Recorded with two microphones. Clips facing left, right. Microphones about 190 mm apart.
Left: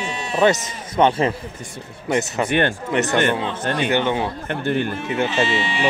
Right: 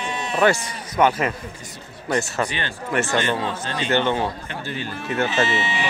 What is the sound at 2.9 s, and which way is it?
Speech, 20° left (ahead or behind).